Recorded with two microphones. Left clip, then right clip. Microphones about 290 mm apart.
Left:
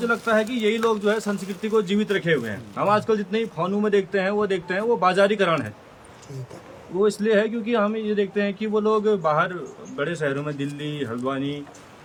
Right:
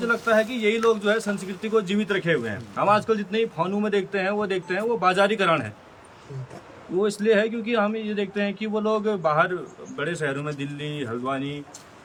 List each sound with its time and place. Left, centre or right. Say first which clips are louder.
0.1 s speech: right 2 dB; centre
7.0 s speech: left 1 dB; centre